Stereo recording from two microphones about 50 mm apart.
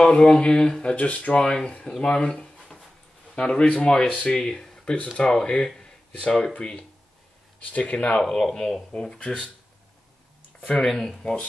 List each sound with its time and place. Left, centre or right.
0.0 s speech: centre
0.9 s speech: left
8.2 s speech: centre
10.6 s speech: left
10.9 s speech: centre